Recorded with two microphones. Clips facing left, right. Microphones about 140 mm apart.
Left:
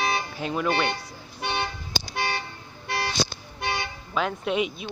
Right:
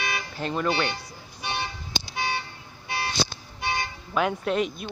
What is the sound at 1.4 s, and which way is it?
Toot, 65° left (ahead or behind).